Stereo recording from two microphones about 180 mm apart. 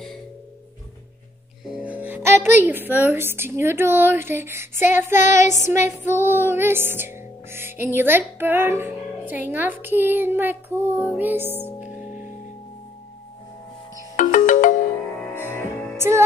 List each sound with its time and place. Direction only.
1.8 s music: 10° right (ahead or behind)
2.6 s a woman's voice: 10° right (ahead or behind)
5.2 s child singing: 45° left (ahead or behind)
5.6 s a woman's voice: 15° right (ahead or behind)
6.0 s music: 10° right (ahead or behind)
12.0 s music: 45° left (ahead or behind)
14.1 s ringtone: 45° left (ahead or behind)